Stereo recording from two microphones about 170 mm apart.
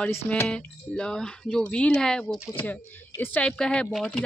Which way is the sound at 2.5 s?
10° left (ahead or behind).